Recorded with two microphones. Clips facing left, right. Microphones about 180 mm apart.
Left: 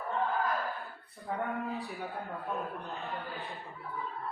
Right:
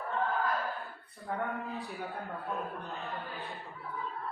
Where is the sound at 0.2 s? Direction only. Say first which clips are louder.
Even; centre (ahead or behind).